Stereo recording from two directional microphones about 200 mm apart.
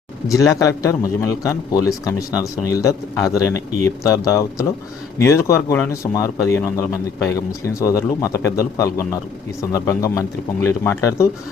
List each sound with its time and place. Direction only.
0.3 s a man's voice: 15° left (ahead or behind)